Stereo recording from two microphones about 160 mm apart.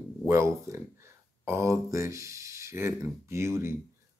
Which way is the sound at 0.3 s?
15° right (ahead or behind).